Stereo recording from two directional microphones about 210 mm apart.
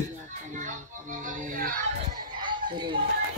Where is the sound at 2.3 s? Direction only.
20° right (ahead or behind).